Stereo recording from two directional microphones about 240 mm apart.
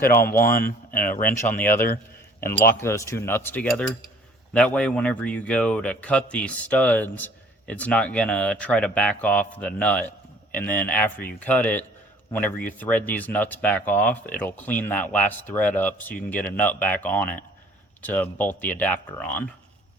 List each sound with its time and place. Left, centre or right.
0.1 s speech: left
1.2 s speech: centre
2.7 s speech: centre